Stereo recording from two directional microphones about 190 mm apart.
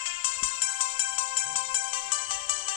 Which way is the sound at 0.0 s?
25° left (ahead or behind).